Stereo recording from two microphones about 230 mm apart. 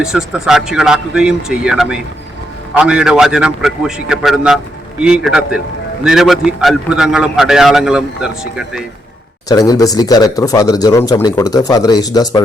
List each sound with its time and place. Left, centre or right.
0.0 s a man's voice: centre
9.5 s speech: centre